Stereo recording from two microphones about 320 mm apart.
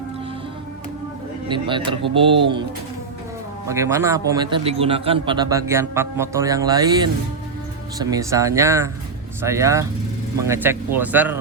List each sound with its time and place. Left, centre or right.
1.5 s a man's voice: centre
3.7 s a man's voice: centre